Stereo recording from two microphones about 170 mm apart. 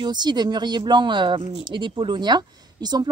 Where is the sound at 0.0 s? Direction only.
25° right (ahead or behind).